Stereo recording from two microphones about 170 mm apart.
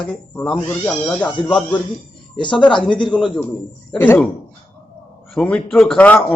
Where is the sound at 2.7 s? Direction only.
30° left (ahead or behind).